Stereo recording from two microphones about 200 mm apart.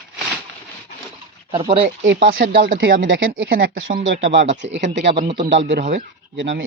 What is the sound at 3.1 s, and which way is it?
Speech, 70° right (ahead or behind).